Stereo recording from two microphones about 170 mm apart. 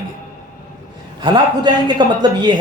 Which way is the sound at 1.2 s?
25° right (ahead or behind).